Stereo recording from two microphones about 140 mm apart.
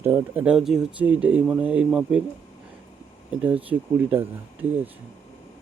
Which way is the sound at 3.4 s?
10° right (ahead or behind).